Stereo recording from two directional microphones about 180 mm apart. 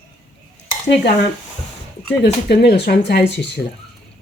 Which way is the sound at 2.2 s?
65° left (ahead or behind).